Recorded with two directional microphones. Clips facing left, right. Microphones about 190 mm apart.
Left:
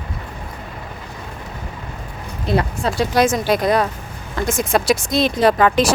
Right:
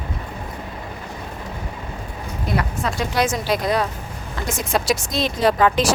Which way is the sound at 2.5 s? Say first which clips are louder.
Left 4 dB; 30° left (ahead or behind).